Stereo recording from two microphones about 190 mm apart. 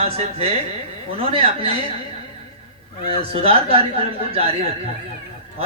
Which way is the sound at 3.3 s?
30° right (ahead or behind).